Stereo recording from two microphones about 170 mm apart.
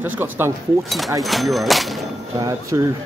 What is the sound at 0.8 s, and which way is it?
Speech, centre (ahead or behind).